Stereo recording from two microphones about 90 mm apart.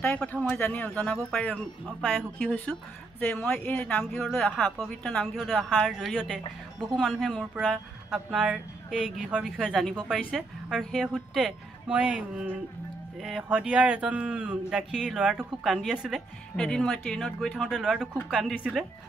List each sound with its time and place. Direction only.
0.0 s a woman's voice: 15° left (ahead or behind); by 11.5 s 5° right (ahead or behind)
11.9 s speech: 15° right (ahead or behind)
16.5 s speech: 5° left (ahead or behind)
17.6 s a woman's voice: 5° right (ahead or behind)